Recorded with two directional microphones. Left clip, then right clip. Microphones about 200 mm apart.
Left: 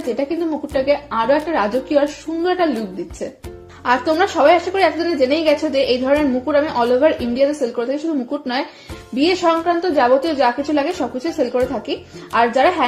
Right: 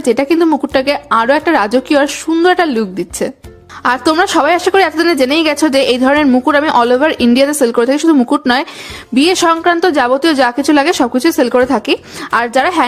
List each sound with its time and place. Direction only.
0.2 s a woman's voice: 40° right (ahead or behind)
3.8 s a woman's voice: 35° right (ahead or behind)